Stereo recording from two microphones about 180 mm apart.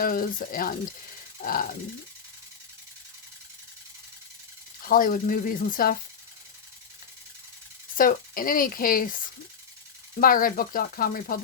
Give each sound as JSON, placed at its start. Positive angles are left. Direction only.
{"t": 0.0, "sound": "speech", "side_deg": 50}
{"t": 4.8, "sound": "speech", "side_deg": 50}
{"t": 7.9, "sound": "speech", "side_deg": 50}
{"t": 10.2, "sound": "speech", "side_deg": 50}